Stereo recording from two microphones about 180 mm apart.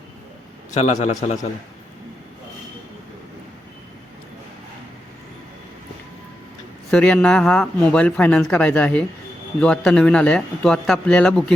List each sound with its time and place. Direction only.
0.7 s a man's voice: 40° left (ahead or behind)
6.9 s a man's voice: 5° left (ahead or behind)